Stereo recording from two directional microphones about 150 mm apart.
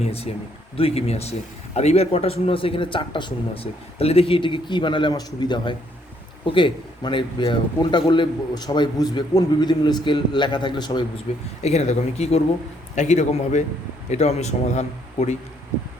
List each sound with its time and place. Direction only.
0.0 s a man's voice: 40° left (ahead or behind)
11.3 s a man's voice: 45° left (ahead or behind)